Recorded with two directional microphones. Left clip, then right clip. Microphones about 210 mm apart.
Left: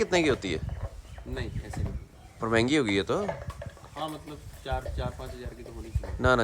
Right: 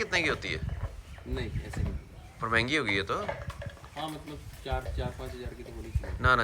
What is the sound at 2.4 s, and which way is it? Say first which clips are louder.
Speech: left 2 dB; 25° left (ahead or behind).